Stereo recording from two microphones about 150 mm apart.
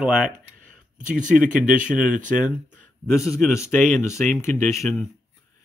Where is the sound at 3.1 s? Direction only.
20° left (ahead or behind).